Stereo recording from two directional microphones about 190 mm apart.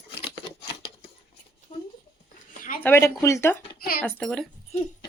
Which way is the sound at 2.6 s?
45° left (ahead or behind).